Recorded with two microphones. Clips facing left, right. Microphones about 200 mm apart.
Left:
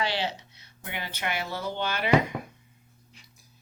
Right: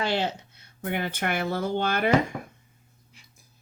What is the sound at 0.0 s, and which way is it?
Speech, 50° right (ahead or behind).